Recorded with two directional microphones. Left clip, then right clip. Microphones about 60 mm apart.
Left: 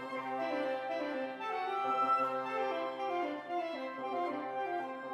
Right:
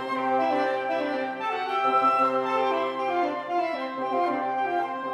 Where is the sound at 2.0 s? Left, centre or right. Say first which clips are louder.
Right 10 dB; left.